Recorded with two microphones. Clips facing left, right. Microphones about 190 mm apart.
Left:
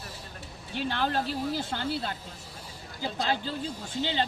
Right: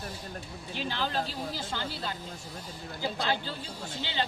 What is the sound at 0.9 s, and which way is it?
Speech, 55° left (ahead or behind).